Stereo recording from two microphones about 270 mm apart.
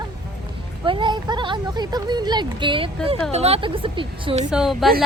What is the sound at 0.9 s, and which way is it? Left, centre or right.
Speech, centre.